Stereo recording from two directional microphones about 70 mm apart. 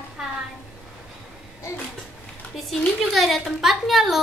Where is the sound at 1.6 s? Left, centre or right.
Left.